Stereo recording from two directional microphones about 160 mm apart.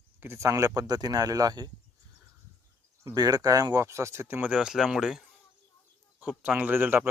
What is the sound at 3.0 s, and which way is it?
Speech, 25° right (ahead or behind).